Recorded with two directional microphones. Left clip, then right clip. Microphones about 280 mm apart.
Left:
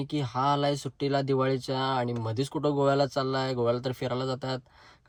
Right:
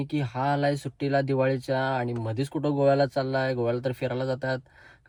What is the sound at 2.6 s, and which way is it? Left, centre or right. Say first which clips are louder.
Speech: right 3 dB; left.